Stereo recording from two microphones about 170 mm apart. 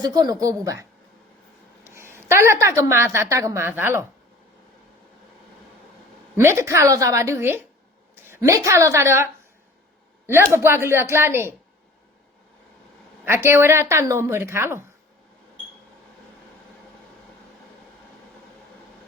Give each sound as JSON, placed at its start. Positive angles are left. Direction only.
{"t": 0.0, "sound": "a woman's voice", "side_deg": -20}
{"t": 6.3, "sound": "a woman's voice", "side_deg": -15}
{"t": 13.2, "sound": "a woman's voice", "side_deg": -15}